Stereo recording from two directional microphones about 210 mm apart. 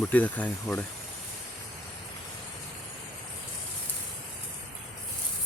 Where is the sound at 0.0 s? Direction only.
5° left (ahead or behind).